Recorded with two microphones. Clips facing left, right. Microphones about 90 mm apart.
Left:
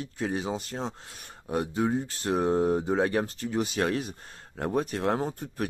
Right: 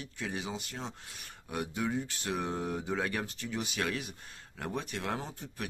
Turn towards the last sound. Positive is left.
turn(degrees=40)  # may be behind; listen again after turning